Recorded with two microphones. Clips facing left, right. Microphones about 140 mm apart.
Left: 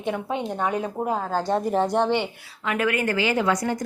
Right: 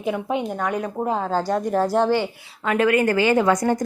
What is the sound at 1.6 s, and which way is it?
Speech, centre (ahead or behind).